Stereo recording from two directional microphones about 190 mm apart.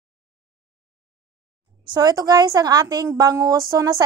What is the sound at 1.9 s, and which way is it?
A woman's voice, 20° right (ahead or behind).